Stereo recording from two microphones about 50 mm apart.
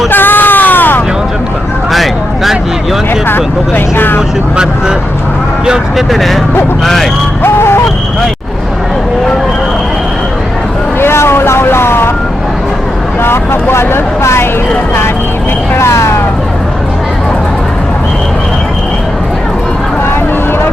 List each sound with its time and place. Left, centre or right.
0.1 s a sound: left
1.9 s vehicle: centre
3.9 s vehicle: left
5.6 s speech: centre
6.1 s speech: centre
7.4 s a sound: left
11.0 s vehicle: left
13.2 s vehicle: left
15.8 s vehicle: left